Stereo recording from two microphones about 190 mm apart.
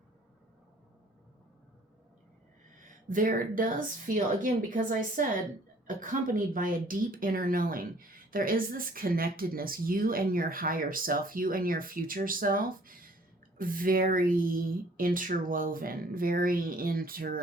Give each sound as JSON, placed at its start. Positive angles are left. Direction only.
{"t": 2.7, "sound": "speech", "side_deg": -45}